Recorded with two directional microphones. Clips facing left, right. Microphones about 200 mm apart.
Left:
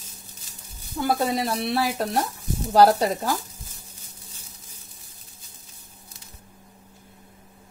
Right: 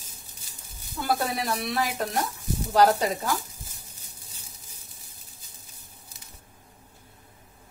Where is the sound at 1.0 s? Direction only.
25° left (ahead or behind).